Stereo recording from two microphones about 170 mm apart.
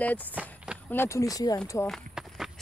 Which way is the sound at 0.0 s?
10° left (ahead or behind).